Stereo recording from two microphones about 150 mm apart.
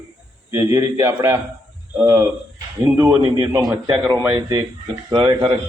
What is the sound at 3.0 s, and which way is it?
A man's voice, 25° right (ahead or behind).